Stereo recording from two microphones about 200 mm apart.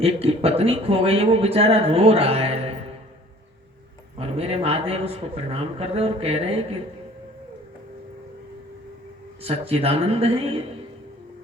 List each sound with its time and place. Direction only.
0.0 s a man's voice: 30° right (ahead or behind)
4.2 s a man's voice: 30° right (ahead or behind)
9.4 s a man's voice: 30° right (ahead or behind)